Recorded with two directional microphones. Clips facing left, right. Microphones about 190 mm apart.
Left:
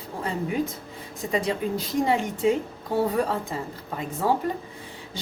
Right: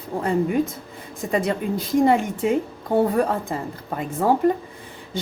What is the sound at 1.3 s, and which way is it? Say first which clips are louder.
Speech: right 3 dB; 50° right (ahead or behind).